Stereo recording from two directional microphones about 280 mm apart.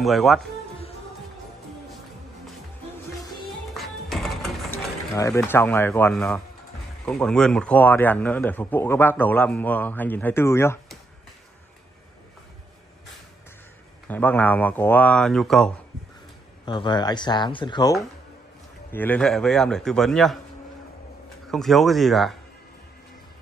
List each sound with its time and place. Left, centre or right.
0.0 s speech: centre
3.7 s music: centre
5.4 s a man's voice: centre
14.0 s speech: centre
16.6 s a man's voice: centre
21.5 s speech: centre